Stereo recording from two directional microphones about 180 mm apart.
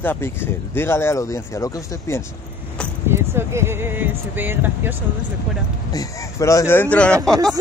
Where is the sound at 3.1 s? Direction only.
15° right (ahead or behind).